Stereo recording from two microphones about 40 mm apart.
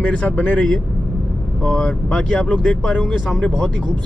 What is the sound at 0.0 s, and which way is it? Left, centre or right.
Speech, left.